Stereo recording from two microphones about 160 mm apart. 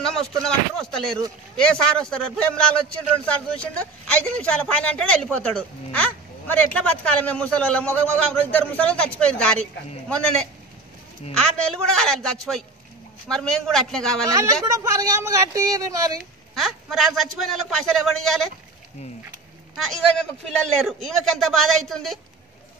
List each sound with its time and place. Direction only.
0.4 s a man's voice: 5° left (ahead or behind)
11.3 s a man's voice: 5° left (ahead or behind)
14.2 s speech: 20° right (ahead or behind)
16.5 s a man's voice: centre (ahead or behind)
19.8 s a man's voice: 5° left (ahead or behind)